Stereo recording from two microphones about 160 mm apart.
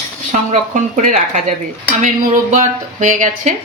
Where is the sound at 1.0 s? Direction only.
50° right (ahead or behind).